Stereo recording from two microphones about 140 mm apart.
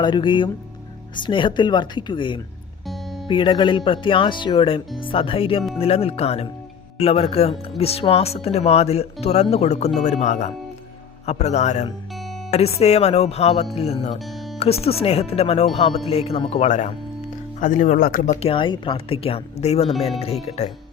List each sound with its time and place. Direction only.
0.0 s speech: 35° left (ahead or behind)
2.8 s music: centre (ahead or behind)
3.2 s speech: 35° left (ahead or behind); by 16.9 s 60° left (ahead or behind)
17.6 s speech: 70° left (ahead or behind); by 18.3 s 90° left
18.4 s speech: 35° left (ahead or behind)